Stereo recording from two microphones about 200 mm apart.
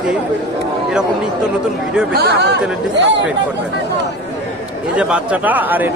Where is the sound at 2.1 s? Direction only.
55° right (ahead or behind).